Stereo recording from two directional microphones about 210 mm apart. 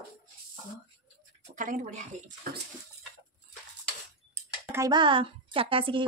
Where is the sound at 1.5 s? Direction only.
35° right (ahead or behind).